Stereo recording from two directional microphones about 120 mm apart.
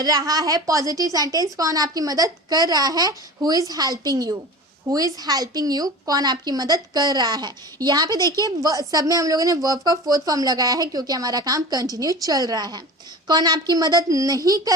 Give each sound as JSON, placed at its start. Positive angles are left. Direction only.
{"t": 0.0, "sound": "speech", "side_deg": -30}